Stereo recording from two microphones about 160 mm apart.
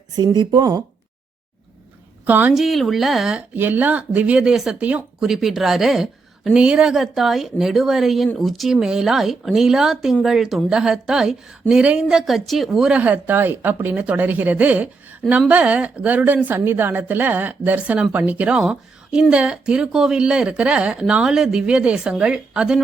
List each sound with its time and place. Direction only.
0.2 s speech: 25° right (ahead or behind)
2.2 s a woman's voice: 10° right (ahead or behind)